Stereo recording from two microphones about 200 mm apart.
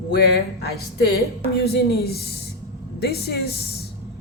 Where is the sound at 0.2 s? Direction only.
55° left (ahead or behind).